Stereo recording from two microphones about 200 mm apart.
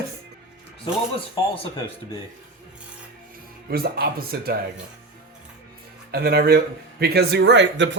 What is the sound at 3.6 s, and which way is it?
Speech, 50° right (ahead or behind).